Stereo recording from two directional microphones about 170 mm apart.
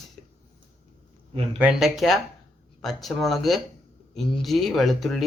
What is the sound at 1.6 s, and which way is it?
Speech, 5° right (ahead or behind).